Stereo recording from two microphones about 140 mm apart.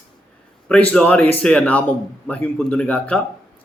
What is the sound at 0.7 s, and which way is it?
A man's voice, 10° left (ahead or behind).